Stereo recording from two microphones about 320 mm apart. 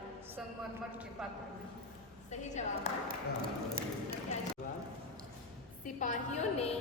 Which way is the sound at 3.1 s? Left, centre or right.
Right.